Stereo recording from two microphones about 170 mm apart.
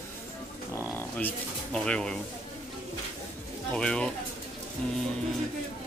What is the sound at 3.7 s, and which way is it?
Speech, 5° left (ahead or behind).